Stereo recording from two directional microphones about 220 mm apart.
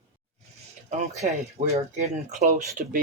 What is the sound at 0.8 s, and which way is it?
Speech, 30° right (ahead or behind).